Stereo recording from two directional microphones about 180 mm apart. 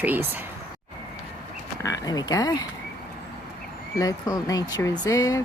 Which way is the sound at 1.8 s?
20° left (ahead or behind).